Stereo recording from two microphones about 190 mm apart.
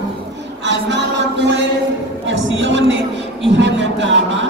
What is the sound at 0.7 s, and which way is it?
Music, 70° right (ahead or behind).